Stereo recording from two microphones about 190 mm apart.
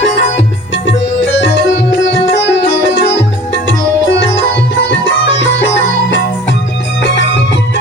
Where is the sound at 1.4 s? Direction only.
65° left (ahead or behind).